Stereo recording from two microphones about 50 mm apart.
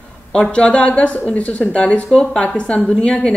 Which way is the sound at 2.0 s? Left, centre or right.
Centre.